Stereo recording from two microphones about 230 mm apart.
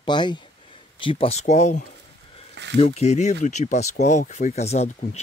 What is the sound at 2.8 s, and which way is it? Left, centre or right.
Speech, left.